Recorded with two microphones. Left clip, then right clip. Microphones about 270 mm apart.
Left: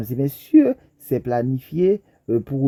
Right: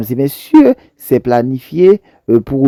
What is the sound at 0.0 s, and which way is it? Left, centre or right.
Speech, right.